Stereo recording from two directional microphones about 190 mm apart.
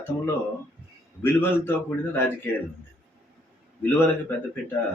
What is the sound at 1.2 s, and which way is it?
Speech, 10° left (ahead or behind).